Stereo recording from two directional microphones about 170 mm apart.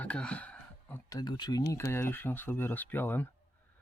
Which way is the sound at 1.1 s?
25° left (ahead or behind).